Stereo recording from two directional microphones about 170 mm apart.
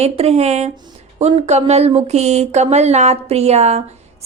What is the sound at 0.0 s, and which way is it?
Speech, 40° right (ahead or behind).